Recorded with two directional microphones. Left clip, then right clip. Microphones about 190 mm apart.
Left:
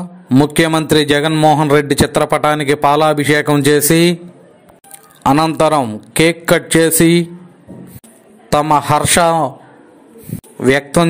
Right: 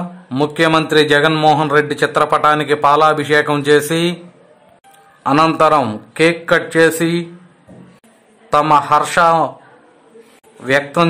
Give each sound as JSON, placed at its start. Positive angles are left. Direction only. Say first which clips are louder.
{"t": 0.4, "sound": "a man's voice", "louder": "even", "side_deg": 25}
{"t": 1.3, "sound": "a man's voice", "louder": "left 1 dB", "side_deg": 5}
{"t": 1.7, "sound": "a man's voice", "louder": "left 2 dB", "side_deg": 25}
{"t": 5.6, "sound": "a man's voice", "louder": "right 1 dB", "side_deg": 25}
{"t": 8.5, "sound": "a man's voice", "louder": "right 1 dB", "side_deg": 25}
{"t": 10.6, "sound": "a man's voice", "louder": "left 2 dB", "side_deg": 30}